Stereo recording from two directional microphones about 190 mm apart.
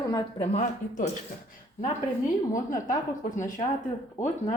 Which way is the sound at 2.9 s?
40° left (ahead or behind).